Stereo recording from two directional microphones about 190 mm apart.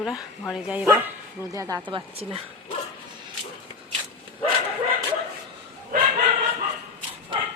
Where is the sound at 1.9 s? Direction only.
30° right (ahead or behind).